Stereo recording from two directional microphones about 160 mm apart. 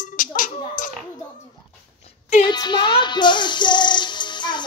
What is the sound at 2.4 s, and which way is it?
Music, 30° left (ahead or behind).